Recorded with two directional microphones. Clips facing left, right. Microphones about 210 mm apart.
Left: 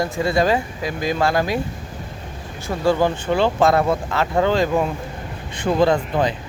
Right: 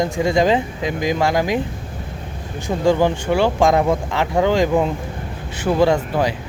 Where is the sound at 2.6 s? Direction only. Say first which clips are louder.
Right 2 dB; 15° right (ahead or behind).